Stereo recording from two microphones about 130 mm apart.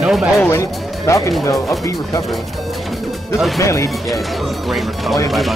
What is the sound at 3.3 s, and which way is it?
Speech, centre (ahead or behind).